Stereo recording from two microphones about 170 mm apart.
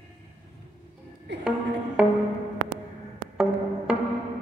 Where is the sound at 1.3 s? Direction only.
90° right.